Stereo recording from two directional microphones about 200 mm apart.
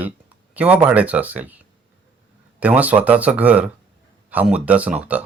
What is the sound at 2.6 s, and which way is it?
Speech, 5° right (ahead or behind).